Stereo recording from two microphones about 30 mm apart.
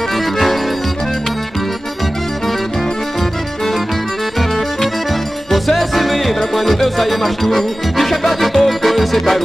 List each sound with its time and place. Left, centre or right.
5.5 s music: centre